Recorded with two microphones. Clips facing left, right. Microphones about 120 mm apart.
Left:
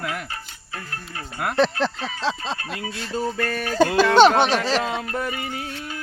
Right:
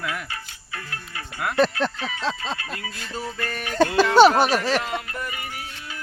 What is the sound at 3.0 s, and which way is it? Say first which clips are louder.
Music: left 7 dB; 30° left (ahead or behind).